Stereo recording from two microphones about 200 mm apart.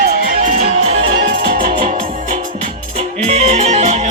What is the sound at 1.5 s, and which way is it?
Music, 45° right (ahead or behind).